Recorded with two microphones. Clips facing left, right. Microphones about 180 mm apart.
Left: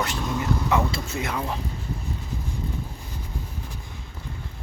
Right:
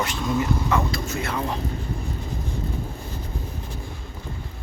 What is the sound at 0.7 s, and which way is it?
Speech, 25° left (ahead or behind).